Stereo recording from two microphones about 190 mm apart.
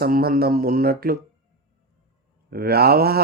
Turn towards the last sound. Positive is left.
turn(degrees=-55)  # may be behind; listen again after turning